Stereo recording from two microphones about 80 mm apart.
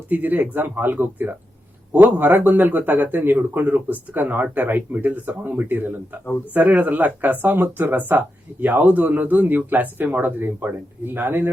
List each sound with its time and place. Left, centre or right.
0.1 s speech: right